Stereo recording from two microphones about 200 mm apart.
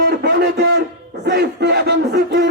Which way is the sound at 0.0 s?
50° right (ahead or behind).